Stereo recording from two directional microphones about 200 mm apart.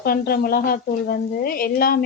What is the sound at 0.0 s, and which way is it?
Speech, 50° left (ahead or behind).